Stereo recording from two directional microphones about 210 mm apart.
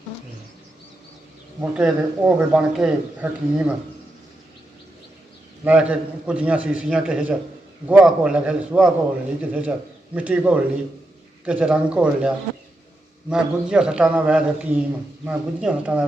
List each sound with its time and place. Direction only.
1.7 s speech: 5° right (ahead or behind)
5.6 s a man's voice: 5° right (ahead or behind)
13.3 s a man's voice: 5° right (ahead or behind)